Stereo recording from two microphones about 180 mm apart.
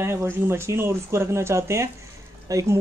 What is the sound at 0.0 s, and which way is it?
Speech, 15° right (ahead or behind).